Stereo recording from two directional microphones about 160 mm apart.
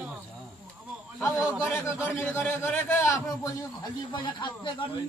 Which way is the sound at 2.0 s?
10° left (ahead or behind).